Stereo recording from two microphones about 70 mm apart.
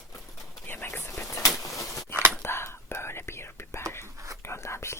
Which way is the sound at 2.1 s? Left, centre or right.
Right.